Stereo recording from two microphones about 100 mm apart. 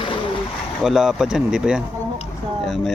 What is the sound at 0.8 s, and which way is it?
Speech, 5° right (ahead or behind).